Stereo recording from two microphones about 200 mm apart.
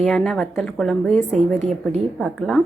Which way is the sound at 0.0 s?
Centre (ahead or behind).